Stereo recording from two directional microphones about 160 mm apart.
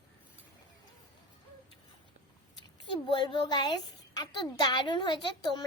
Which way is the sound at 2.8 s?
30° left (ahead or behind).